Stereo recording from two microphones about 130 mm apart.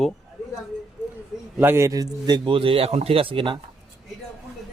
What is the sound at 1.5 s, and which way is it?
A man's voice, 20° right (ahead or behind).